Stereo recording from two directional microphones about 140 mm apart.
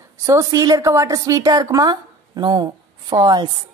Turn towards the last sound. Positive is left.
turn(degrees=-30)  # may be behind; listen again after turning